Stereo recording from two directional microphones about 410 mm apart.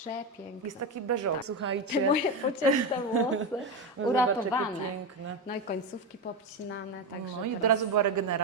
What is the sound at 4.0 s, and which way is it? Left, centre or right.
Speech, right.